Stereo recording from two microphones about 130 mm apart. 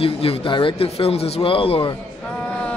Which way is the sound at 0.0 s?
45° left (ahead or behind).